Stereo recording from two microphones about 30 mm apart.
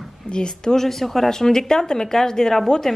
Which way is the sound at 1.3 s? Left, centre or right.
Centre.